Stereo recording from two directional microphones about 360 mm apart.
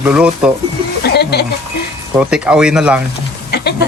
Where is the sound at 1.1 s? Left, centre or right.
Left.